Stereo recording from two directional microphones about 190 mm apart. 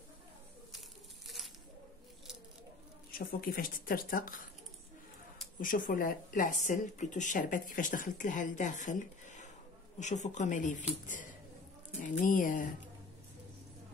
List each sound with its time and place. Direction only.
0.7 s tearing: centre (ahead or behind)
3.1 s speech: 50° left (ahead or behind)
5.6 s speech: 45° left (ahead or behind)
12.0 s speech: 45° left (ahead or behind)